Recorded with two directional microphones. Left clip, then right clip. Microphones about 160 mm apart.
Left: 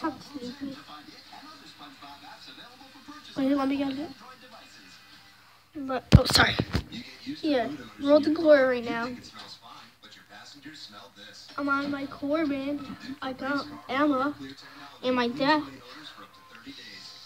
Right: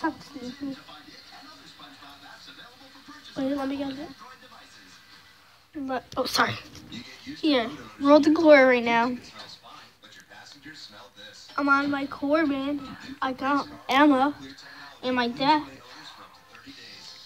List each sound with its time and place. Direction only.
3.3 s a woman's voice: 20° left (ahead or behind)
5.9 s a woman's voice: 5° right (ahead or behind)
7.4 s speech: 50° right (ahead or behind)
11.5 s speech: 45° right (ahead or behind)
13.2 s speech: 45° right (ahead or behind)
15.0 s a woman's voice: 15° right (ahead or behind)